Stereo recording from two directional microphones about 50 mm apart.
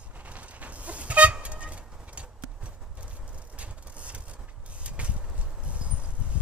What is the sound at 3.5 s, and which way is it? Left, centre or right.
Vehicle, right.